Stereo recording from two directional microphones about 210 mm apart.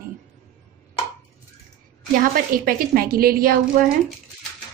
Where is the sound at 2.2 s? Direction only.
45° right (ahead or behind).